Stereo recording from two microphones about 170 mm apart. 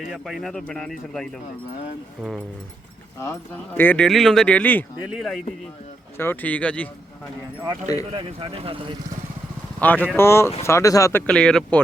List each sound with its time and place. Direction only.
0.1 s speech: centre (ahead or behind)
3.2 s speech: 15° left (ahead or behind)
5.0 s speech: centre (ahead or behind)
6.1 s speech: 10° left (ahead or behind)
8.1 s speech: 30° right (ahead or behind)
9.8 s speech: 10° left (ahead or behind)
11.3 s speech: 5° left (ahead or behind)